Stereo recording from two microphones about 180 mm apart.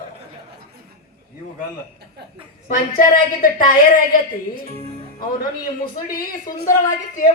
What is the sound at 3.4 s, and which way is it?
Speech, 50° left (ahead or behind).